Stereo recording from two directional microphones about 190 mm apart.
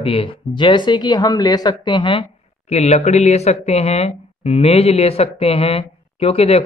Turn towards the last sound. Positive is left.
turn(degrees=30)  # may be behind; listen again after turning